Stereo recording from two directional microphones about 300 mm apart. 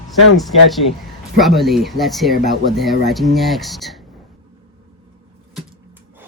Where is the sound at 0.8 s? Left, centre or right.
Left.